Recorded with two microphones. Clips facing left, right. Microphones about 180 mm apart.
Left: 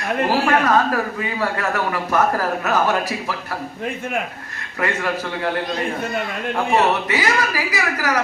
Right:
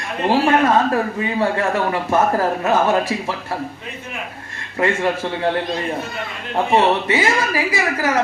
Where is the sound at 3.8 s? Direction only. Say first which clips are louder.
Left 8 dB; 50° left (ahead or behind).